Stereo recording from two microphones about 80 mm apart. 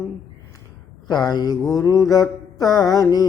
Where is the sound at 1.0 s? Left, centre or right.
Left.